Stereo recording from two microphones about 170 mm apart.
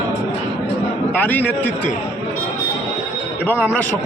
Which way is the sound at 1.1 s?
10° left (ahead or behind).